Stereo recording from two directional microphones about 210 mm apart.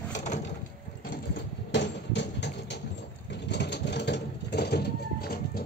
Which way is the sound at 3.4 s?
55° left (ahead or behind).